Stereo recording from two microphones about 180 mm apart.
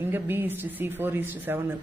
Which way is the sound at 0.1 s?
10° right (ahead or behind).